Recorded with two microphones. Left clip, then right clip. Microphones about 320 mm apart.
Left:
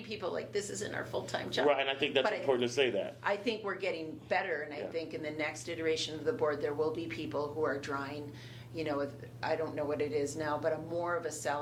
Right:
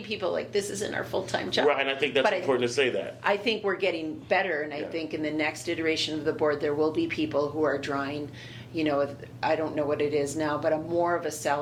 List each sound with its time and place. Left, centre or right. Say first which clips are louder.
0.1 s a woman's voice: right 8 dB; right
1.6 s speech: right 3 dB; left
3.2 s a woman's voice: right 10 dB; right